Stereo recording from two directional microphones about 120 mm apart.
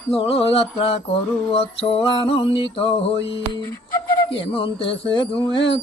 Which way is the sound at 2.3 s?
50° left (ahead or behind).